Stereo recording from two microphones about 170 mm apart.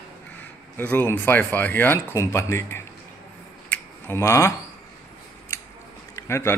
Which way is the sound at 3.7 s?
15° left (ahead or behind).